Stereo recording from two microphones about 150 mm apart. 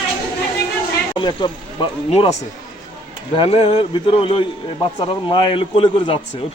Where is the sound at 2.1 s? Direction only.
45° left (ahead or behind).